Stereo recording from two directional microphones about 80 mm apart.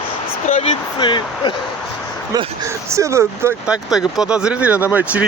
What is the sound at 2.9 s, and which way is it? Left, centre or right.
Speech, right.